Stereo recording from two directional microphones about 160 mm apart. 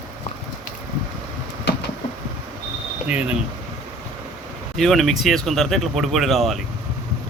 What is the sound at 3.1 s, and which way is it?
Speech, 5° right (ahead or behind).